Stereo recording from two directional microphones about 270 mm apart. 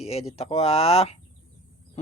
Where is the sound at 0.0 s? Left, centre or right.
Left.